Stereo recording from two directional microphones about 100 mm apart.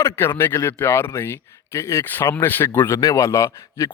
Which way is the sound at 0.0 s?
25° left (ahead or behind).